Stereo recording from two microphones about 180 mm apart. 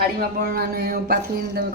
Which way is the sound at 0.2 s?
60° right (ahead or behind).